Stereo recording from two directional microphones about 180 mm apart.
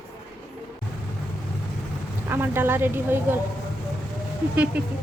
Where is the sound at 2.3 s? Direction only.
10° right (ahead or behind).